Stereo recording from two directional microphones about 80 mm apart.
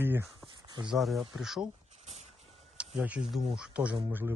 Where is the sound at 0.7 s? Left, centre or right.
Right.